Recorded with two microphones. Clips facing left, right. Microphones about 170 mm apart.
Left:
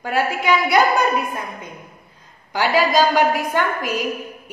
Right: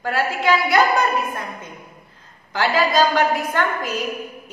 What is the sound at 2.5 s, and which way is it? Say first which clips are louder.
A woman's voice: left 1 dB; 10° left (ahead or behind).